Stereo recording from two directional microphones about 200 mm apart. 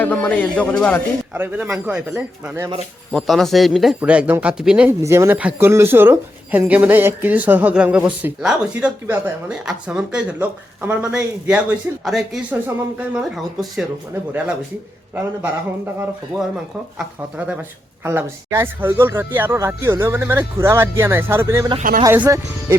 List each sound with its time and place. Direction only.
0.0 s a man's voice: 5° left (ahead or behind)
1.3 s speech: 10° right (ahead or behind)
2.6 s speech: 25° right (ahead or behind)
3.1 s speech: centre (ahead or behind)
17.3 s speech: 5° right (ahead or behind)
21.8 s speech: 40° right (ahead or behind)
22.0 s speech: 15° right (ahead or behind)